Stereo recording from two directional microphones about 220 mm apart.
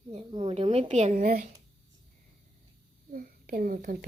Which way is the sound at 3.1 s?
40° right (ahead or behind).